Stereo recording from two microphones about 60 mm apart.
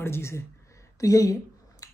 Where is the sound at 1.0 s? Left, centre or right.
Left.